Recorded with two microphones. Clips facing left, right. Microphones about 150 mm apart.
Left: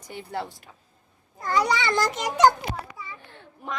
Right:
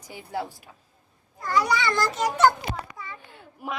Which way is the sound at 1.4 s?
20° left (ahead or behind).